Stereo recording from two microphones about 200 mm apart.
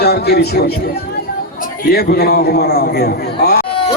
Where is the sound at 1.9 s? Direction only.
50° left (ahead or behind).